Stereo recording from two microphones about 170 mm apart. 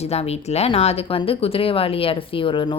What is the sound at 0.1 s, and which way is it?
Speech, 40° left (ahead or behind).